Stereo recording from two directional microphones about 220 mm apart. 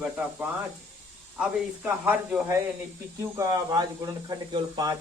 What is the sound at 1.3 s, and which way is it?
Speech, 5° right (ahead or behind).